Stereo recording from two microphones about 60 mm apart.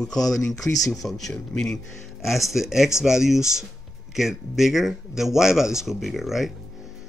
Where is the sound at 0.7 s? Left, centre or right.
Left.